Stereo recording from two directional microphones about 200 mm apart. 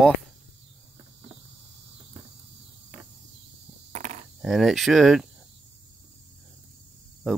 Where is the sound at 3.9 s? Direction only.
35° right (ahead or behind).